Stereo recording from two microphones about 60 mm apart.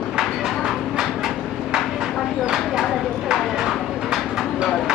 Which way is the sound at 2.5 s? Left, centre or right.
Centre.